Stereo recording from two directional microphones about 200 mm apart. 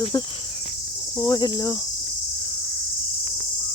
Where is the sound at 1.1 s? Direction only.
20° left (ahead or behind).